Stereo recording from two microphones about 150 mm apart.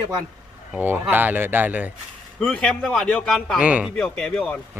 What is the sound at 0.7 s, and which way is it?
A man's voice, 15° right (ahead or behind).